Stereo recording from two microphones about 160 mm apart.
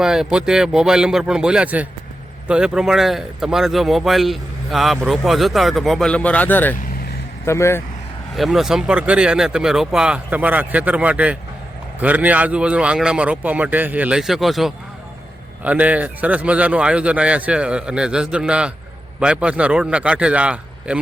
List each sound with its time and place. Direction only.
0.0 s speech: 5° right (ahead or behind); by 7.8 s 15° left (ahead or behind)
8.4 s a man's voice: centre (ahead or behind)